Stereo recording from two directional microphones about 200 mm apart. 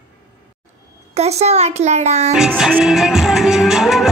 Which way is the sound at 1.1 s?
30° right (ahead or behind).